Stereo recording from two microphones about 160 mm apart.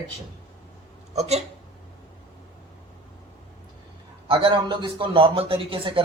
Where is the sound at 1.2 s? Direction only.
40° right (ahead or behind).